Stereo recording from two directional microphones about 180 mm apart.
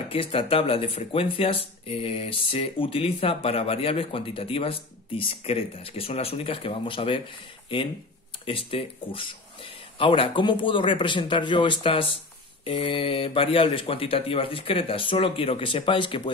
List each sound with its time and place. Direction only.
0.1 s speech: 30° left (ahead or behind)